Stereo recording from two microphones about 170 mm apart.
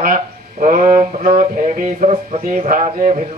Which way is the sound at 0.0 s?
55° right (ahead or behind).